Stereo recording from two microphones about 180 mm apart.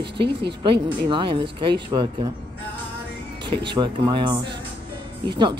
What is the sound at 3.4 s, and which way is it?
Speech, 25° right (ahead or behind).